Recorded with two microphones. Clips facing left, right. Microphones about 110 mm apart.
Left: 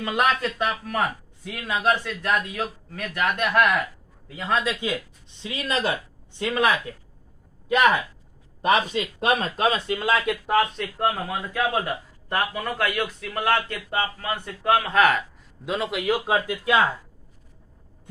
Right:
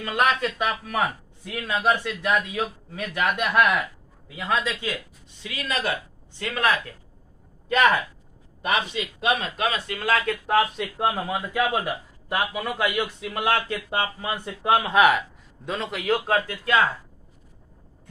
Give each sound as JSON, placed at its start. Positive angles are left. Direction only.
{"t": 0.0, "sound": "speech", "side_deg": 15}
{"t": 0.4, "sound": "speech", "side_deg": -5}
{"t": 1.9, "sound": "a man's voice", "side_deg": -15}
{"t": 3.3, "sound": "speech", "side_deg": 0}
{"t": 4.6, "sound": "speech", "side_deg": 15}
{"t": 5.4, "sound": "speech", "side_deg": 30}
{"t": 8.6, "sound": "a man's voice", "side_deg": 35}
{"t": 10.4, "sound": "speech", "side_deg": 0}
{"t": 11.0, "sound": "a man's voice", "side_deg": -15}
{"t": 15.6, "sound": "speech", "side_deg": 5}
{"t": 16.3, "sound": "speech", "side_deg": 15}